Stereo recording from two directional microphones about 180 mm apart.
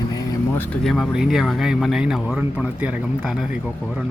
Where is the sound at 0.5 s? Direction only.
5° left (ahead or behind).